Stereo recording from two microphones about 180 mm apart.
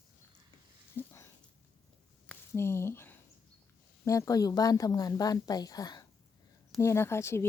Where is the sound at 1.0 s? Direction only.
10° left (ahead or behind).